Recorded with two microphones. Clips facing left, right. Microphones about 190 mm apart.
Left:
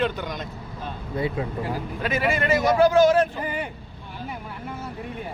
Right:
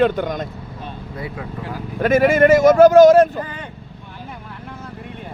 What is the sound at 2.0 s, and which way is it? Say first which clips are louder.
Speech: right 12 dB; 45° right (ahead or behind).